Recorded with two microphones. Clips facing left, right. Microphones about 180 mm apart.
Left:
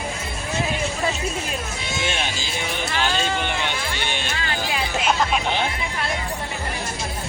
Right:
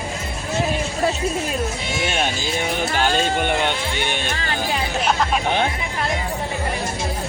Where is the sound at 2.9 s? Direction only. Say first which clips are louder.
Right 3 dB; 45° right (ahead or behind).